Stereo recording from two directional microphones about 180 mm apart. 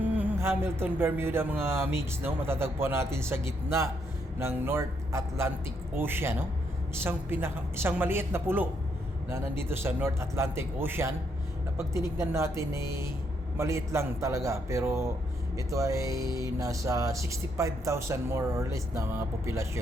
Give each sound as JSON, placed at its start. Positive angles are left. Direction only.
{"t": 0.0, "sound": "speech", "side_deg": -10}